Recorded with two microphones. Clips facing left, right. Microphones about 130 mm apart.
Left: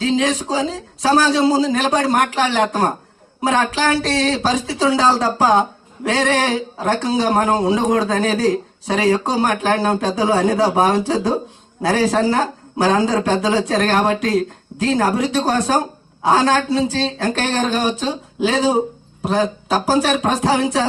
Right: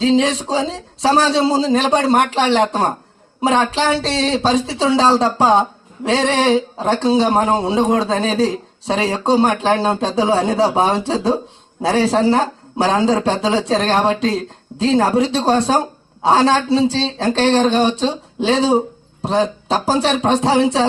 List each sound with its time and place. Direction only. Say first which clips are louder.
0.0 s speech: right 3 dB; 30° right (ahead or behind)